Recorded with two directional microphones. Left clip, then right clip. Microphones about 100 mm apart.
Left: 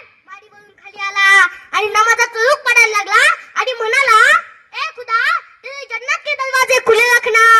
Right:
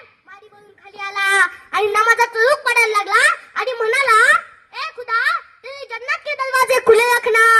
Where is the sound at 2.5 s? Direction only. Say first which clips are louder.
Left 4 dB; 65° left (ahead or behind).